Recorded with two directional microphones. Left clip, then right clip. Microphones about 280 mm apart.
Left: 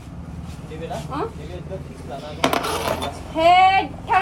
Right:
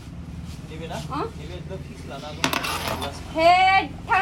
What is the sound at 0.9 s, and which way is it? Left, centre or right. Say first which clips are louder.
Speech: left 2 dB; centre.